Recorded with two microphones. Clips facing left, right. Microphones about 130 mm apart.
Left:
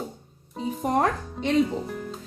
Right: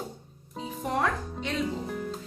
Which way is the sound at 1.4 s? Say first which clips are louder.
Left 8 dB; centre (ahead or behind).